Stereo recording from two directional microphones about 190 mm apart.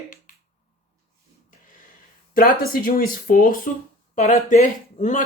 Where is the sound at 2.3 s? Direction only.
50° left (ahead or behind).